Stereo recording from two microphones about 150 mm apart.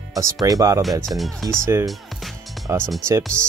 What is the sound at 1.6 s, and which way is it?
Speech, 20° right (ahead or behind).